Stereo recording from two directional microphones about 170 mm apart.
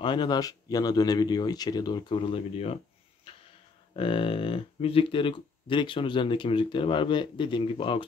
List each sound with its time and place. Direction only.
0.0 s speech: 25° left (ahead or behind)
3.9 s speech: 30° left (ahead or behind)